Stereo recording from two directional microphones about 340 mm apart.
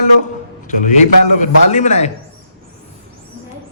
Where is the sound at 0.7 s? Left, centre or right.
Left.